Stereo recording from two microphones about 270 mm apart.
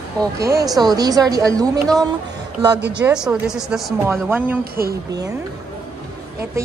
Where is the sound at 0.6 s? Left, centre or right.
Centre.